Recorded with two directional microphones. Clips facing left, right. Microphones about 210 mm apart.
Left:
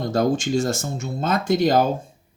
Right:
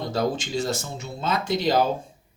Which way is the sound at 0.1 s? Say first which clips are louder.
Left 6 dB; 50° left (ahead or behind).